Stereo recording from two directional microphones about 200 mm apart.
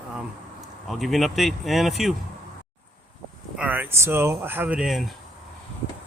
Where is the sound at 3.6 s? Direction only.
10° right (ahead or behind).